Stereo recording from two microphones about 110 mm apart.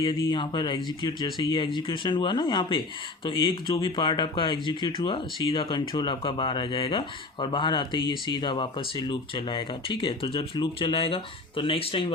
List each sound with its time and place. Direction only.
0.0 s speech: 45° left (ahead or behind)